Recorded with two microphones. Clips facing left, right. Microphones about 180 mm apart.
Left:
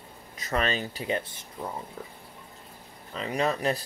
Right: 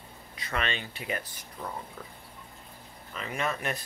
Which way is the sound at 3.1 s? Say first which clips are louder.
Left 5 dB; 35° left (ahead or behind).